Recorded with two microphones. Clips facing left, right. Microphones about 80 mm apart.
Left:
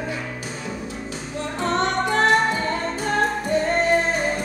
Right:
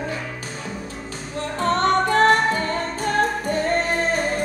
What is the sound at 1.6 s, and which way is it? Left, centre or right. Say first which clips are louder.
Music: right 3 dB; right.